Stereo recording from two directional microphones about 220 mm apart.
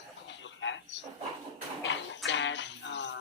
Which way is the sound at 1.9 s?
60° left (ahead or behind).